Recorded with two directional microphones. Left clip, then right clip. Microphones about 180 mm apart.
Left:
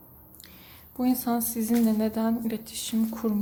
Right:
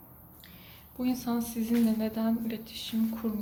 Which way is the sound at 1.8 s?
45° left (ahead or behind).